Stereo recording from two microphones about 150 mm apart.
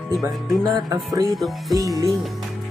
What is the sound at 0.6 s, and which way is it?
Speech, 25° right (ahead or behind).